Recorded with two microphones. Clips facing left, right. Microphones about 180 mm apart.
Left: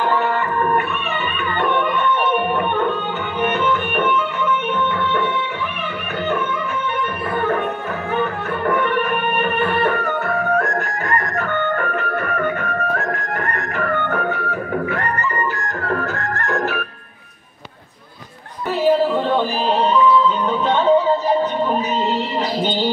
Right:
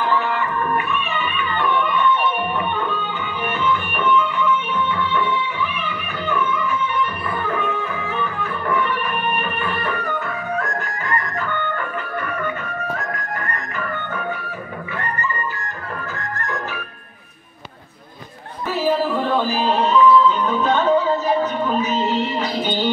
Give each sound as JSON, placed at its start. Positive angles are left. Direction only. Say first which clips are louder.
{"t": 0.0, "sound": "music", "louder": "left 2 dB", "side_deg": 45}
{"t": 3.6, "sound": "music", "louder": "left 2 dB", "side_deg": 55}
{"t": 19.3, "sound": "a sound", "louder": "left 1 dB", "side_deg": 30}
{"t": 20.6, "sound": "music", "louder": "left 1 dB", "side_deg": 30}